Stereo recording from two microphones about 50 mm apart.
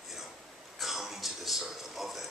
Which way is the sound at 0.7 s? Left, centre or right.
Centre.